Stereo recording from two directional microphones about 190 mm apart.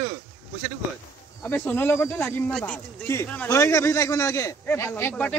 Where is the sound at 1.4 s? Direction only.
10° left (ahead or behind).